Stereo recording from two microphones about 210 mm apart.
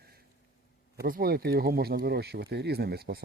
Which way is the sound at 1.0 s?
45° right (ahead or behind).